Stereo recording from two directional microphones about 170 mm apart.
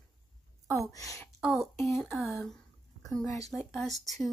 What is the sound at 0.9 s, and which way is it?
Speech, 20° left (ahead or behind).